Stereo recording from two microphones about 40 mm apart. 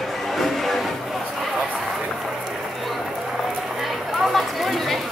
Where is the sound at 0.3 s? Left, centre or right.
Centre.